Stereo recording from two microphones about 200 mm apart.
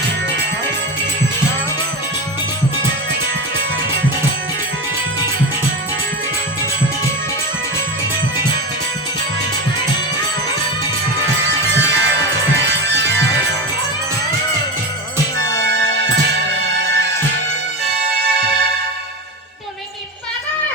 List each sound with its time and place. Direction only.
11.4 s music: 65° right (ahead or behind)